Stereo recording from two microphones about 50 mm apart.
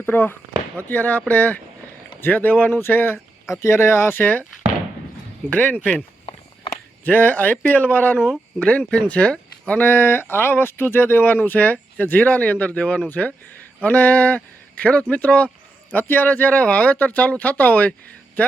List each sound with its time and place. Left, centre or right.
0.1 s speech: left
3.5 s speech: left
4.2 s speech: left
5.5 s speech: left
5.8 s speech: left
7.0 s speech: left
8.5 s speech: left
9.8 s speech: left
15.9 s speech: left